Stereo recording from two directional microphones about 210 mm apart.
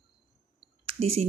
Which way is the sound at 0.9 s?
30° right (ahead or behind).